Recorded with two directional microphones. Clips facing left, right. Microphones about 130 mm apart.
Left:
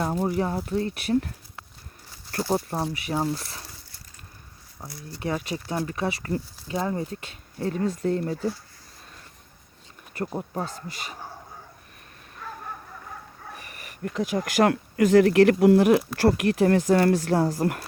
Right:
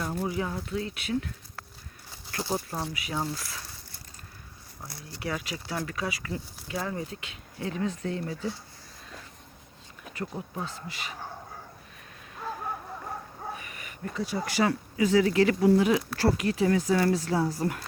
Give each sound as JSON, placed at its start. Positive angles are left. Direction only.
{"t": 0.0, "sound": "speech", "side_deg": 45}
{"t": 2.3, "sound": "speech", "side_deg": 35}
{"t": 5.2, "sound": "speech", "side_deg": 35}
{"t": 5.7, "sound": "speech", "side_deg": 25}
{"t": 7.1, "sound": "speech", "side_deg": 40}
{"t": 10.2, "sound": "speech", "side_deg": 45}
{"t": 14.0, "sound": "speech", "side_deg": 70}
{"t": 14.3, "sound": "speech", "side_deg": 55}